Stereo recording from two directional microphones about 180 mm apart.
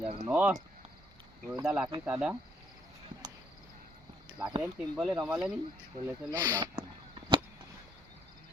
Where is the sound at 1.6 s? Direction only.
5° right (ahead or behind).